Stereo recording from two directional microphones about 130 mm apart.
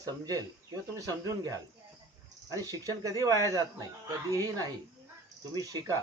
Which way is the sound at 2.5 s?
25° right (ahead or behind).